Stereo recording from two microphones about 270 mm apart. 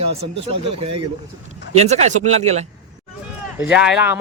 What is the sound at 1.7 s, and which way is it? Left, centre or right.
Speech, right.